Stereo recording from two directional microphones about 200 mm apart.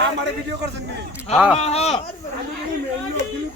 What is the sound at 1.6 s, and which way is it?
Speech, 30° left (ahead or behind).